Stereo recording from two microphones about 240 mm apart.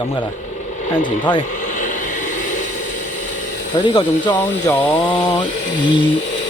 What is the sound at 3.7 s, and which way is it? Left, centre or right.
Speech, centre.